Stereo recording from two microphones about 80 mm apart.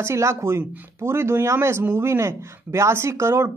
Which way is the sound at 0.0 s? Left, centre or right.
Right.